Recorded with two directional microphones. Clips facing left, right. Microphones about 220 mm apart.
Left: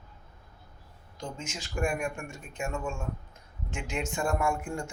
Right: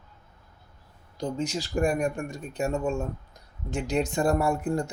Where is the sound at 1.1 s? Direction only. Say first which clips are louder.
Right 10 dB; 35° right (ahead or behind).